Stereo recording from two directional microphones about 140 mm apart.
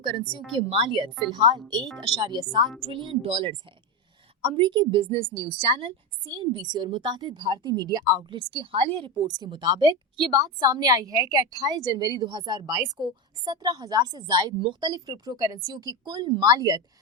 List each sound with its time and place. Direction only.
0.0 s a woman's voice: 35° right (ahead or behind)
9.2 s a woman's voice: 30° right (ahead or behind)
10.3 s a woman's voice: 25° right (ahead or behind)